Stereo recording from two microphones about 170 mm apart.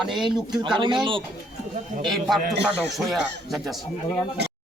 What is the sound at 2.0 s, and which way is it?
Speech, centre (ahead or behind).